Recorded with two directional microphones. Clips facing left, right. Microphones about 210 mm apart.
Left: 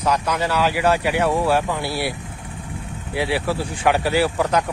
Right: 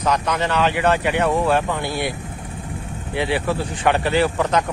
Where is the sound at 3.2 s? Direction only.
5° left (ahead or behind).